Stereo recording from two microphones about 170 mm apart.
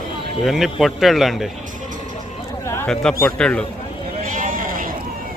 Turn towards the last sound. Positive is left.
turn(degrees=-55)  # may be behind; listen again after turning